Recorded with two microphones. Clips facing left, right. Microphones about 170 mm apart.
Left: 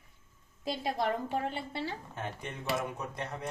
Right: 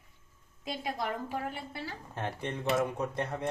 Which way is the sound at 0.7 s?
25° left (ahead or behind).